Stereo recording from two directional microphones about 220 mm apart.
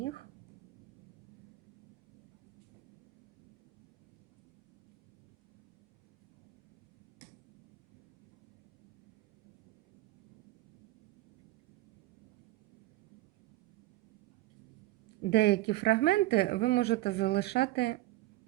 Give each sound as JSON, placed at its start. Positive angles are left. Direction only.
{"t": 15.3, "sound": "speech", "side_deg": 50}